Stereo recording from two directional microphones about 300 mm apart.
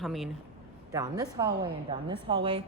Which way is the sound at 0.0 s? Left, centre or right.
Centre.